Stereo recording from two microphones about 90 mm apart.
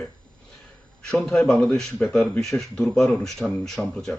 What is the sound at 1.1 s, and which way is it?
Speech, 5° left (ahead or behind).